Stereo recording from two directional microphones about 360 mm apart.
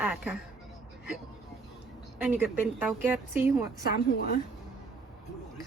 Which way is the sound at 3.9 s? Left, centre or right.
Left.